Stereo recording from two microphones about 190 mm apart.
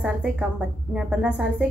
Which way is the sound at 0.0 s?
5° right (ahead or behind).